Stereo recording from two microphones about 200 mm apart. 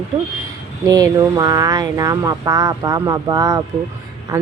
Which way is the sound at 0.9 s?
20° right (ahead or behind).